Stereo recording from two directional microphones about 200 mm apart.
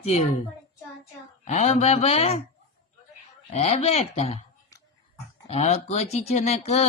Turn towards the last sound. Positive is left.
turn(degrees=35)  # may be behind; listen again after turning